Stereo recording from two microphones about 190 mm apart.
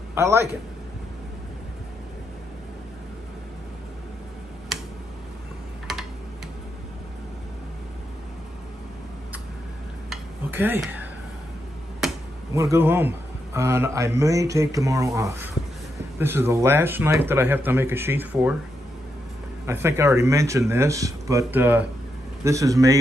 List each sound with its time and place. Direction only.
0.1 s a man's voice: 15° right (ahead or behind)
10.0 s dishes: 10° right (ahead or behind)
12.0 s finger snapping: centre (ahead or behind)
12.5 s a man's voice: 15° right (ahead or behind)
19.6 s a man's voice: 15° right (ahead or behind)